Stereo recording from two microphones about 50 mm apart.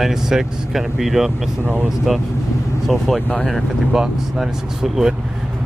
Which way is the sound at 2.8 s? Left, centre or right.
Centre.